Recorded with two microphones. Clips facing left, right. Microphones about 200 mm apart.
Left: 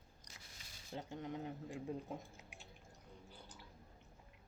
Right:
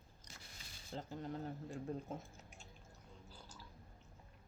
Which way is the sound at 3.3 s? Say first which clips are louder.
Even; 65° left (ahead or behind).